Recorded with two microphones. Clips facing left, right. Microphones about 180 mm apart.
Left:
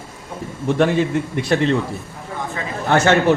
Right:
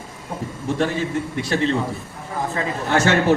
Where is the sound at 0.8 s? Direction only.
60° left (ahead or behind).